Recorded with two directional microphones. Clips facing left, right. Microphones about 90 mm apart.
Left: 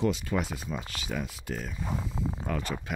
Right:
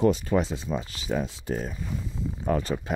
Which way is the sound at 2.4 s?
30° right (ahead or behind).